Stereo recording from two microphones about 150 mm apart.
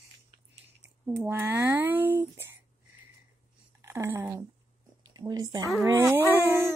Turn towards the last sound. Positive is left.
turn(degrees=-15)  # may be behind; listen again after turning